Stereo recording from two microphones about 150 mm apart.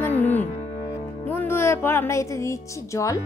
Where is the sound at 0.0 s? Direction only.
15° left (ahead or behind).